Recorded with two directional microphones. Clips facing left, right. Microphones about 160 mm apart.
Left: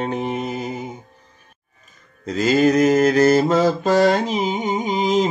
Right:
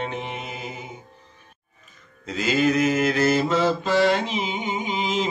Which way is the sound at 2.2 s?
40° left (ahead or behind).